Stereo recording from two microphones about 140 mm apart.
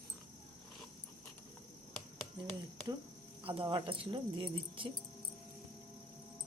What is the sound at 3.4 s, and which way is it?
Speech, 40° right (ahead or behind).